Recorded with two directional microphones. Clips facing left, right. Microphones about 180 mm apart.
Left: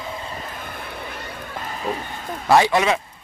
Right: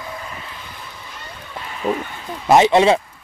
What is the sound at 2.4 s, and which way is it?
Speech, 20° right (ahead or behind).